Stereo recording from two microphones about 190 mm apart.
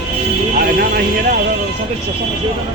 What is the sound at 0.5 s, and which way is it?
Music, 50° right (ahead or behind).